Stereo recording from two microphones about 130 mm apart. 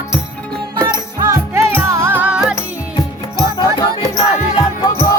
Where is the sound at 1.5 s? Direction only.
20° right (ahead or behind).